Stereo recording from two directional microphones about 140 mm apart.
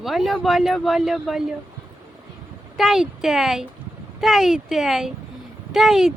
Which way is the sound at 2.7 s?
Centre (ahead or behind).